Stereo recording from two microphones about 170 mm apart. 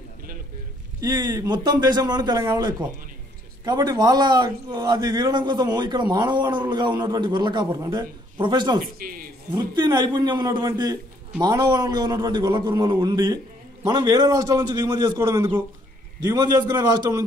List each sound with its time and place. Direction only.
1.0 s a man's voice: 20° right (ahead or behind)
8.8 s speech: 60° right (ahead or behind)
9.5 s a man's voice: 25° right (ahead or behind)